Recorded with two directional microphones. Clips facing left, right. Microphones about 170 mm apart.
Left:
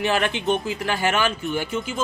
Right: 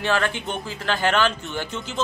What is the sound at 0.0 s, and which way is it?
Speech, 15° left (ahead or behind).